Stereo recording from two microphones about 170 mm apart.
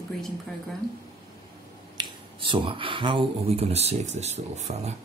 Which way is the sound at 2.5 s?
30° right (ahead or behind).